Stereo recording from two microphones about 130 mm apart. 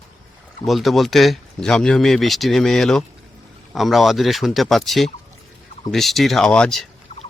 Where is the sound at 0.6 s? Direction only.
Centre (ahead or behind).